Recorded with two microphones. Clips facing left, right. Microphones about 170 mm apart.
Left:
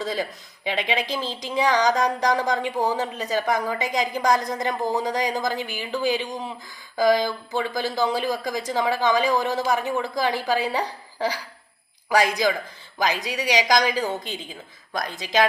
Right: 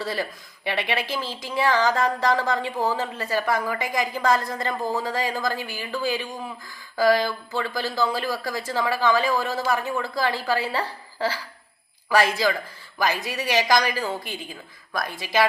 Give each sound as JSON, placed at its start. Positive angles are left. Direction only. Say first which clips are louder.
{"t": 0.0, "sound": "speech", "louder": "left 1 dB", "side_deg": 15}